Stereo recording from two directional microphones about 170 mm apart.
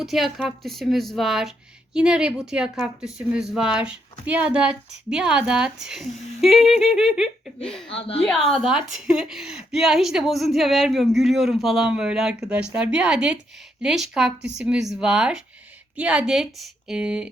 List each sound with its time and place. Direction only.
0.0 s speech: centre (ahead or behind)
7.9 s a woman's voice: 35° left (ahead or behind)
8.4 s speech: centre (ahead or behind)